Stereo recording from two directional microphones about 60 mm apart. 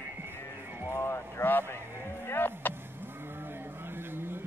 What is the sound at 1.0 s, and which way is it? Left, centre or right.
Speech, left.